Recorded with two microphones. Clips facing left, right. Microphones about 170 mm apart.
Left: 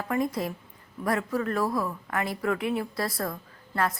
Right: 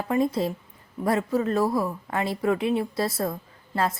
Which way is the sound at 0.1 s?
25° right (ahead or behind).